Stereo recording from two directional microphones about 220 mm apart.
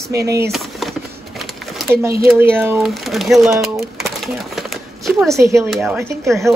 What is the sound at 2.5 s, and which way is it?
Speech, 10° right (ahead or behind).